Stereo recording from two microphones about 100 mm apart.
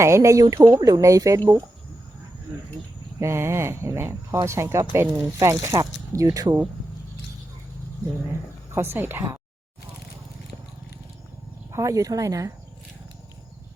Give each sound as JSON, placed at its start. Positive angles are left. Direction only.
{"t": 0.0, "sound": "speech", "side_deg": -30}
{"t": 3.2, "sound": "speech", "side_deg": -25}
{"t": 8.7, "sound": "speech", "side_deg": -25}
{"t": 11.7, "sound": "speech", "side_deg": -30}